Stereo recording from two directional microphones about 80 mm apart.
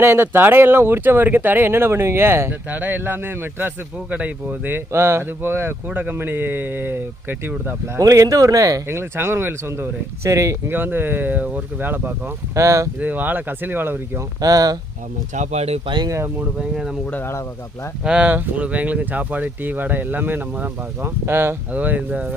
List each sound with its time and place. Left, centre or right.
0.0 s speech: right
4.9 s speech: right
7.9 s speech: right
8.9 s speech: right
10.7 s speech: right
12.5 s speech: right
13.0 s speech: right
14.4 s speech: right
16.0 s speech: right
16.6 s speech: centre
17.1 s speech: left
18.0 s speech: centre; by 21.5 s right
21.7 s speech: centre